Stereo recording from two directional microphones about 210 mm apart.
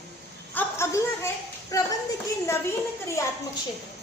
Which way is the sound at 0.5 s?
10° left (ahead or behind).